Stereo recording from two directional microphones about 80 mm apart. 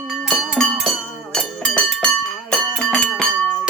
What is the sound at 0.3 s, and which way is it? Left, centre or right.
Music, centre.